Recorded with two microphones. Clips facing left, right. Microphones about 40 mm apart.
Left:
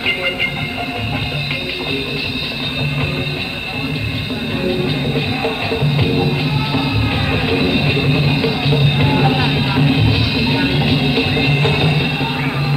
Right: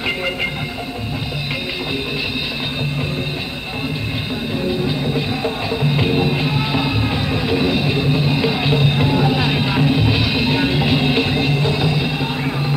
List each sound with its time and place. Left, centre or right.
0.0 s train: centre
5.1 s music: left
5.8 s music: centre
7.2 s music: left
8.4 s music: centre
8.8 s music: centre
9.4 s music: centre
11.3 s music: left